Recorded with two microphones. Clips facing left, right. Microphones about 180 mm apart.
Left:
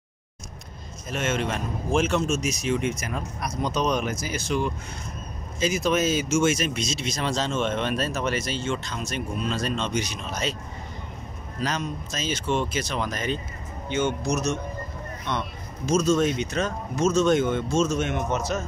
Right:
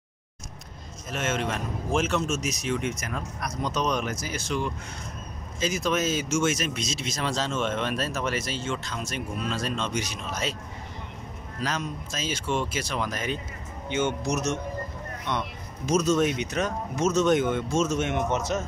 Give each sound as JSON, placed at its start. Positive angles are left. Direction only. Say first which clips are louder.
{"t": 1.1, "sound": "speech", "louder": "left 2 dB", "side_deg": 0}
{"t": 3.1, "sound": "speech", "louder": "left 2 dB", "side_deg": 10}
{"t": 5.6, "sound": "speech", "louder": "left 3 dB", "side_deg": 5}
{"t": 11.6, "sound": "speech", "louder": "left 2 dB", "side_deg": -5}
{"t": 13.8, "sound": "speech", "louder": "left 1 dB", "side_deg": -20}